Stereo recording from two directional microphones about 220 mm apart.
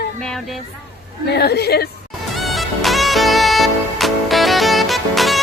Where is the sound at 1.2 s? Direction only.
50° left (ahead or behind).